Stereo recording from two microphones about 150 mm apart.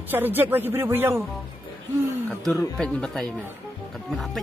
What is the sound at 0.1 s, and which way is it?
Speech, 15° right (ahead or behind).